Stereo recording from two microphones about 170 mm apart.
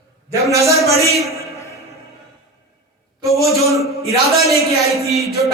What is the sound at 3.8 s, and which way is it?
Speech, 35° left (ahead or behind).